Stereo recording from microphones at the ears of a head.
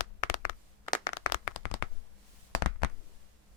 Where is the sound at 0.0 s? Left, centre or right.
Left.